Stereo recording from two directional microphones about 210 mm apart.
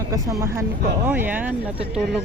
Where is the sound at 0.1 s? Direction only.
15° right (ahead or behind).